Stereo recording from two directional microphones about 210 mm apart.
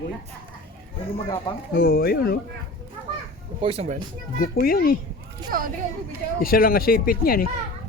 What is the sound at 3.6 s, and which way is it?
Speech, 30° right (ahead or behind).